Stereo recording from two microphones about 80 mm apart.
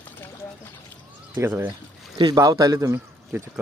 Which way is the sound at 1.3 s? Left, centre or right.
Right.